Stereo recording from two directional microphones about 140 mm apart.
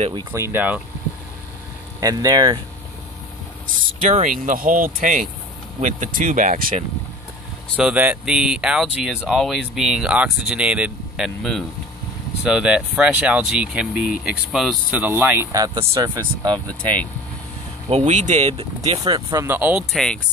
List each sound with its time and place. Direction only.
0.3 s speech: 20° right (ahead or behind)
2.0 s speech: 25° right (ahead or behind)
3.6 s speech: 65° right (ahead or behind)
7.7 s speech: 5° right (ahead or behind)
15.5 s speech: 25° right (ahead or behind)
17.8 s speech: 50° right (ahead or behind)
19.3 s speech: 15° right (ahead or behind)
19.9 s speech: 5° left (ahead or behind)